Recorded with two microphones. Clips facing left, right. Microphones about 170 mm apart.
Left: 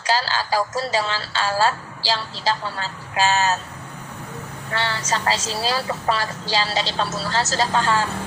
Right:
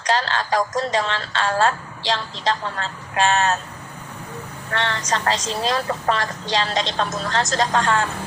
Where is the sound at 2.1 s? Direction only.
5° left (ahead or behind).